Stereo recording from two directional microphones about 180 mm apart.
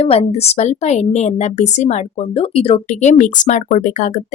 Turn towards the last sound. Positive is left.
turn(degrees=45)  # may be behind; listen again after turning